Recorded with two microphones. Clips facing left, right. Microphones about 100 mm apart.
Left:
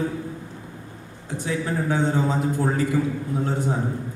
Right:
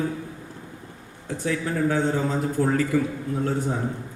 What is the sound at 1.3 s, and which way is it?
A man's voice, 20° left (ahead or behind).